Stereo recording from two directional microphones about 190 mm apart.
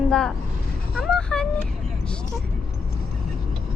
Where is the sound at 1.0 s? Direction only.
5° left (ahead or behind).